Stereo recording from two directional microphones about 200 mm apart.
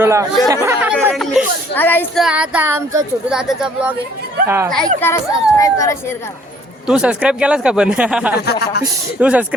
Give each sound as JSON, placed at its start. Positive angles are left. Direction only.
{"t": 0.0, "sound": "a man's voice", "side_deg": -15}
{"t": 2.2, "sound": "speech", "side_deg": -5}
{"t": 3.2, "sound": "a man's voice", "side_deg": -5}
{"t": 4.9, "sound": "speech", "side_deg": 10}
{"t": 6.8, "sound": "a man's voice", "side_deg": -5}
{"t": 8.4, "sound": "speech", "side_deg": 55}
{"t": 9.2, "sound": "speech", "side_deg": -5}